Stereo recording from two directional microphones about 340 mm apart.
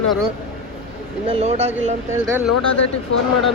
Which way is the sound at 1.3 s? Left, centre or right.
Centre.